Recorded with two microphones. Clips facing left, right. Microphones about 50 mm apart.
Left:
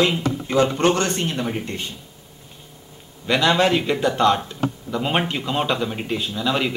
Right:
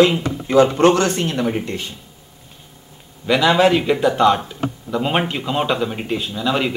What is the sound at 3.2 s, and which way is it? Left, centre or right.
Speech, centre.